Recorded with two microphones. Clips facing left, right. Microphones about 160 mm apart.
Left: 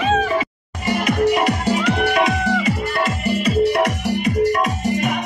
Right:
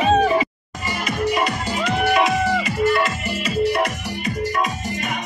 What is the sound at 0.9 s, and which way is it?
Music, 60° left (ahead or behind).